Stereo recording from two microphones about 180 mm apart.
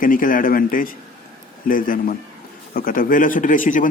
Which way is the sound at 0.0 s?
50° left (ahead or behind).